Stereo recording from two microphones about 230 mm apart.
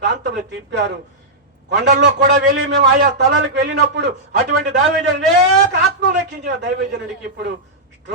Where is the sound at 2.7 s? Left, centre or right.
Right.